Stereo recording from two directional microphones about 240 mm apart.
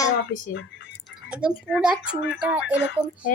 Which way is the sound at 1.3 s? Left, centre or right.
Centre.